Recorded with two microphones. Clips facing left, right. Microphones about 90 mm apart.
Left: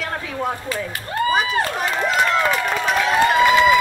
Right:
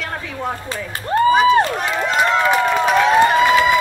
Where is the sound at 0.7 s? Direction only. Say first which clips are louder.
Right 4 dB; 30° right (ahead or behind).